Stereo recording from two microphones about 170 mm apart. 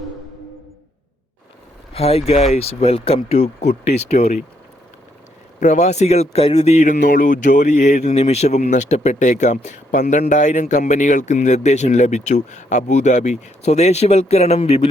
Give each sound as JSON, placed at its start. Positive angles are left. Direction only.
{"t": 1.9, "sound": "speech", "side_deg": 35}
{"t": 5.5, "sound": "speech", "side_deg": 45}